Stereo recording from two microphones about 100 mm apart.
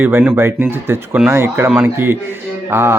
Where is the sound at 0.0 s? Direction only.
20° right (ahead or behind).